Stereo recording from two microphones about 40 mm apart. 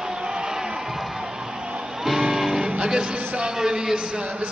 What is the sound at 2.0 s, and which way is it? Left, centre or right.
Music, centre.